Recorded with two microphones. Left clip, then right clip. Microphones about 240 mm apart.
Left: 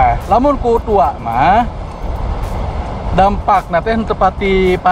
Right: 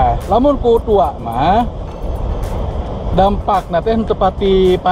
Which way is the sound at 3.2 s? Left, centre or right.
Left.